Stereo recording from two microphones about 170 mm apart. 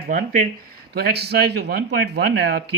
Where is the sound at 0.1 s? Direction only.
50° right (ahead or behind).